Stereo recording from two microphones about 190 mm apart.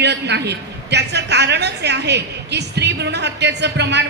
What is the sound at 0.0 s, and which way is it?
A woman's voice, 65° right (ahead or behind).